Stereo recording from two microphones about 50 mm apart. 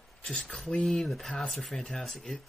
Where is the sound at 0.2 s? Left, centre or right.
Centre.